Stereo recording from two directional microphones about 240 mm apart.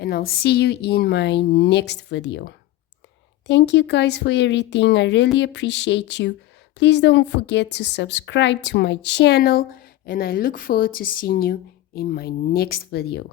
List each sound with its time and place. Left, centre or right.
0.0 s a woman's voice: left